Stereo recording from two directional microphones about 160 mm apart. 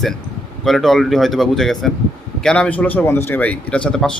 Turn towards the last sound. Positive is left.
turn(degrees=5)  # may be behind; listen again after turning